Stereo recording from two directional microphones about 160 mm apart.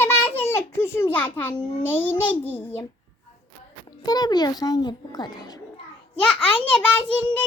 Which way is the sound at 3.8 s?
25° left (ahead or behind).